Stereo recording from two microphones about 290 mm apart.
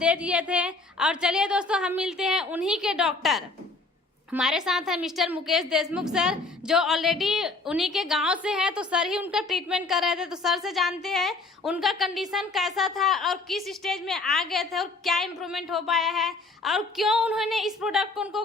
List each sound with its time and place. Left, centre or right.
0.0 s a woman's voice: centre